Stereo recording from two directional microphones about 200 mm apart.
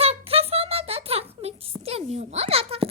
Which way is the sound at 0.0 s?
30° right (ahead or behind).